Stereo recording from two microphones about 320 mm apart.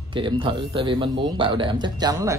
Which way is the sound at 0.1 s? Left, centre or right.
Centre.